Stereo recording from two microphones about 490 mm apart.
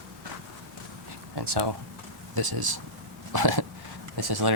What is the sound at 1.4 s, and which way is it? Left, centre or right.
Speech, right.